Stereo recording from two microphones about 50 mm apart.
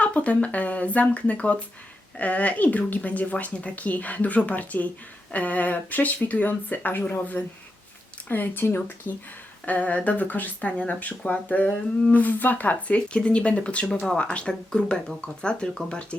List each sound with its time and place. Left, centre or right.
0.0 s speech: left
13.1 s speech: left